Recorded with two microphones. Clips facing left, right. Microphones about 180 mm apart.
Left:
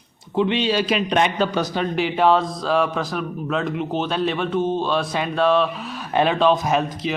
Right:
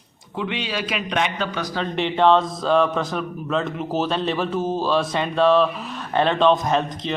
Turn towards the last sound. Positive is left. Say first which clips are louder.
# left 1 dB
turn(degrees=5)  # may be behind; listen again after turning